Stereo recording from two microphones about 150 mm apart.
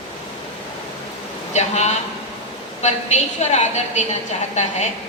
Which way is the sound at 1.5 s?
50° left (ahead or behind).